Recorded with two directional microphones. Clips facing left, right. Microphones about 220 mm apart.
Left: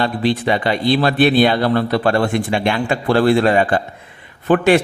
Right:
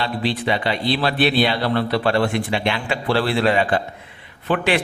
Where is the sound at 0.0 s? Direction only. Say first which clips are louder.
Left 5 dB; 45° left (ahead or behind).